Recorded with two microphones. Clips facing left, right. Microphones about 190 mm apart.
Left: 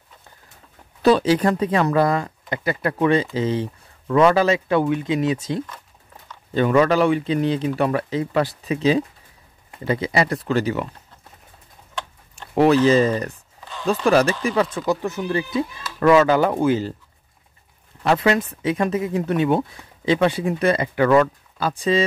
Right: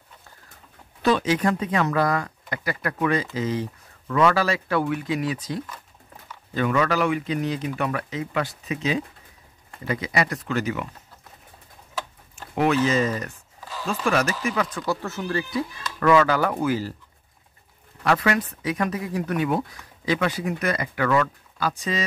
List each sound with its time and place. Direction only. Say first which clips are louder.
1.0 s speech: left 5 dB; 35° left (ahead or behind)
12.5 s speech: left 6 dB; 35° left (ahead or behind)
15.0 s speech: left 4 dB; 15° left (ahead or behind)
18.0 s speech: left 4 dB; 25° left (ahead or behind)